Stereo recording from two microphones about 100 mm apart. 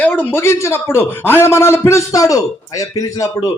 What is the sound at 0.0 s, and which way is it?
A man's voice, 20° left (ahead or behind).